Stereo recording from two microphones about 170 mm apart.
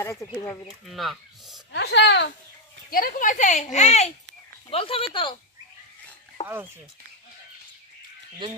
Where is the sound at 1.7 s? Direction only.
90° left.